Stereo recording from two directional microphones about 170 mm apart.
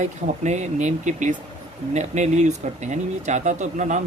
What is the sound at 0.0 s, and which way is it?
Speech, 40° right (ahead or behind).